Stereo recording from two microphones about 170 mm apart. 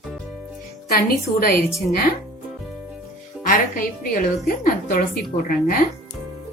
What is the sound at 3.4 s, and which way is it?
A woman's voice, 55° left (ahead or behind).